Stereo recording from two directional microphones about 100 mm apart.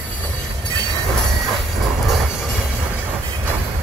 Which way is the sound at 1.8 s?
Centre (ahead or behind).